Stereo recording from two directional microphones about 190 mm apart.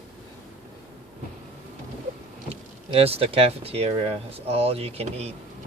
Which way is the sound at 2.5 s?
30° right (ahead or behind).